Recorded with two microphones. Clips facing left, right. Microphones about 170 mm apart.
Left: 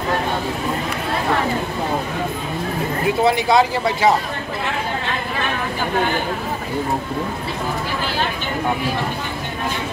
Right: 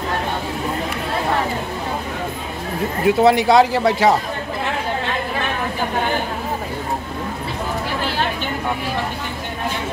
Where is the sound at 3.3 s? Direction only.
75° right (ahead or behind).